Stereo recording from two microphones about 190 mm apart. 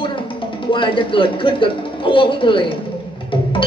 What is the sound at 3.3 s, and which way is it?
Music, 25° left (ahead or behind).